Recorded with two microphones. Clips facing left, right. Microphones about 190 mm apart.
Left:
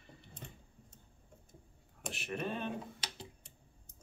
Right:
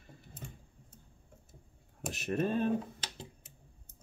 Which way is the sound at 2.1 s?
40° right (ahead or behind).